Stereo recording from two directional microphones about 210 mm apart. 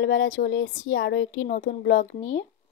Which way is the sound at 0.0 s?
65° left (ahead or behind).